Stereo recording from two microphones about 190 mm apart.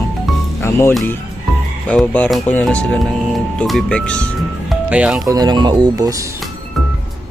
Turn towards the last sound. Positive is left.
turn(degrees=-20)  # may be behind; listen again after turning